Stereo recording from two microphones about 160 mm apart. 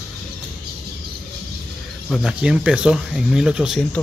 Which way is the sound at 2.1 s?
5° right (ahead or behind).